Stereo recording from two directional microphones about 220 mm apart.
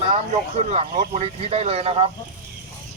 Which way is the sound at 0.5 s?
30° right (ahead or behind).